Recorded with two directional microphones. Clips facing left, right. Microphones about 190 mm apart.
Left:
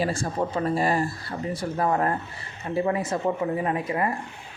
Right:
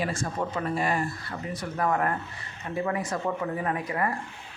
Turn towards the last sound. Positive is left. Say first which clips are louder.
# left 3 dB
turn(degrees=25)  # may be behind; listen again after turning